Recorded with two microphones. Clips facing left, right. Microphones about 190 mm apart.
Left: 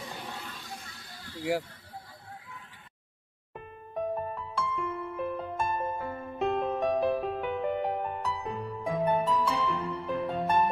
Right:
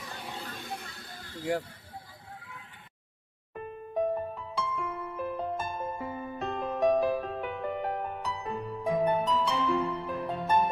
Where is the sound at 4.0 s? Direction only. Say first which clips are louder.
Right 2 dB; centre (ahead or behind).